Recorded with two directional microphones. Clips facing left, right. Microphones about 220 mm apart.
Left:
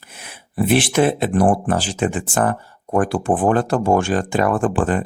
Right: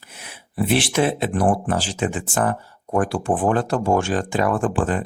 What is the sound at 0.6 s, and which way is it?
Speech, 50° left (ahead or behind).